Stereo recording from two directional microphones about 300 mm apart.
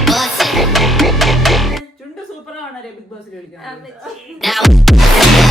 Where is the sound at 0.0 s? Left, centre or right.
Centre.